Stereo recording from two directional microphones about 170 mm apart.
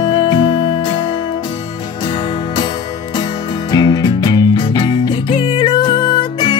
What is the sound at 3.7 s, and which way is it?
Music, 25° left (ahead or behind).